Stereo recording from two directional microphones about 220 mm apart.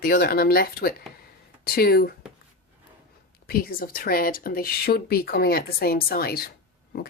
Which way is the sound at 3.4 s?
40° left (ahead or behind).